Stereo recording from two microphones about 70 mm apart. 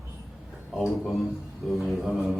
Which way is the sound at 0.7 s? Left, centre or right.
Centre.